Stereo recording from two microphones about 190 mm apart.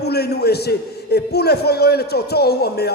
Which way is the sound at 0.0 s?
60° left (ahead or behind).